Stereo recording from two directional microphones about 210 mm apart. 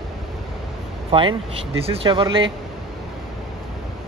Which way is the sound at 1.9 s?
25° right (ahead or behind).